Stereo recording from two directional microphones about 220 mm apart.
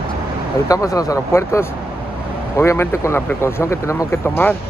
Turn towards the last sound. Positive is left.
turn(degrees=10)  # may be behind; listen again after turning